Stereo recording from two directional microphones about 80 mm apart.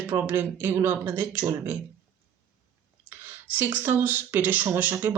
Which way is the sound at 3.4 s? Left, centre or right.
Right.